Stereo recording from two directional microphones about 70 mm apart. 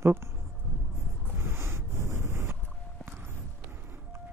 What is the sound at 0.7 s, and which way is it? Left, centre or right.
Vehicle, left.